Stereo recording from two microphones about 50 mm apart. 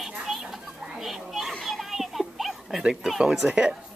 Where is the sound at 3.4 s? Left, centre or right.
Centre.